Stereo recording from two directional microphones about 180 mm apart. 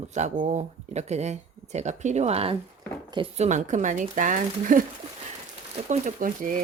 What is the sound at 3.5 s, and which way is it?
Speech, 45° right (ahead or behind).